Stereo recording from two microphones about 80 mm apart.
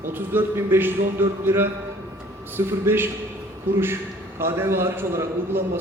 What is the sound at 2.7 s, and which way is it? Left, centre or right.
Speech, right.